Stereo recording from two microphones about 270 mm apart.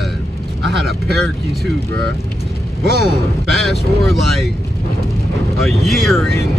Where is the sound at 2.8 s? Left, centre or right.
Right.